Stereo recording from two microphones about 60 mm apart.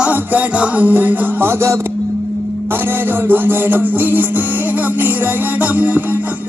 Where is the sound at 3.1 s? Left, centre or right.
Right.